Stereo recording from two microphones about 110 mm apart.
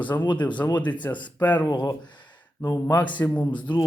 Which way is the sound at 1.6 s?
40° left (ahead or behind).